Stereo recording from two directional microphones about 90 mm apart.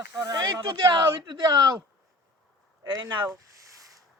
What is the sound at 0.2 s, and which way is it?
Speech, 40° right (ahead or behind).